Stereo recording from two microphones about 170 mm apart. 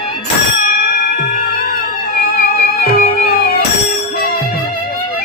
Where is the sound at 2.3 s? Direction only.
55° left (ahead or behind).